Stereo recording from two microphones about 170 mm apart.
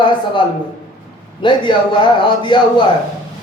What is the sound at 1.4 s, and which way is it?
A man's voice, 30° left (ahead or behind).